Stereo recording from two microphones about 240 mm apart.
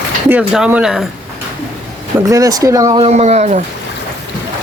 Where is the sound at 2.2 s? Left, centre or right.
Centre; by 3.6 s right.